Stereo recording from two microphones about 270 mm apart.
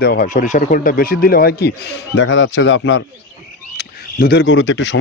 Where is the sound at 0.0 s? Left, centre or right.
Left.